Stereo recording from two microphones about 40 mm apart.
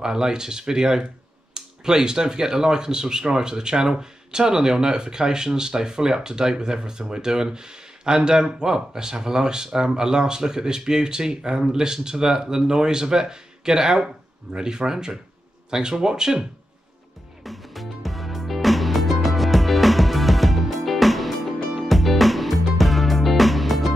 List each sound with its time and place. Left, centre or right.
0.0 s speech: centre
17.4 s music: centre